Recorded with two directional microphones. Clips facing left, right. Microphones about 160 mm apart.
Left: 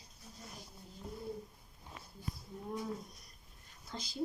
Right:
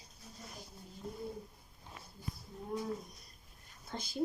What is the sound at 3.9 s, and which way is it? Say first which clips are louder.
Speech: right 2 dB; 55° right (ahead or behind).